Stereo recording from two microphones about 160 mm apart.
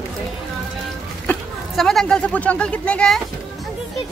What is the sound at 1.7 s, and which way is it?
Speech, 5° left (ahead or behind).